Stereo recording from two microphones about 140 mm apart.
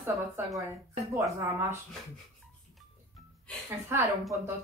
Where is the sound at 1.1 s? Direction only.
20° right (ahead or behind).